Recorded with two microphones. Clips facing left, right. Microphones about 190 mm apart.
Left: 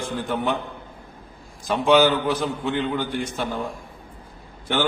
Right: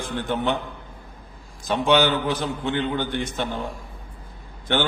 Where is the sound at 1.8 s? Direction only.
5° left (ahead or behind).